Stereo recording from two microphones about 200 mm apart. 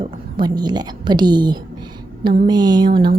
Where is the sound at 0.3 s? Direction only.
20° right (ahead or behind).